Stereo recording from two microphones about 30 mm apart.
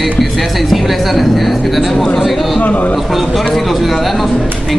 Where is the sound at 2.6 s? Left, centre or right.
Left.